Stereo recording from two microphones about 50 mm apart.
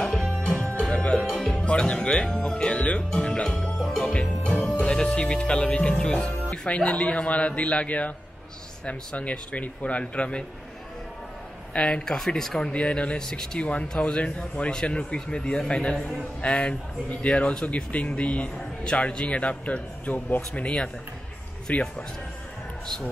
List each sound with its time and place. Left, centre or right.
0.0 s music: centre
1.1 s music: centre
1.5 s speech: centre
3.6 s music: centre
4.1 s music: centre
4.8 s speech: centre
11.7 s speech: centre; by 20.6 s left
21.7 s speech: left